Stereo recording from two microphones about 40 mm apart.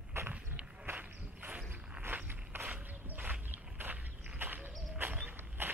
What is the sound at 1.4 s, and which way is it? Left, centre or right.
Cricket, right.